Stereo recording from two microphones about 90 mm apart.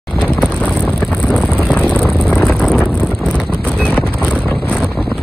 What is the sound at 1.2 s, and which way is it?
Vehicle, 15° left (ahead or behind).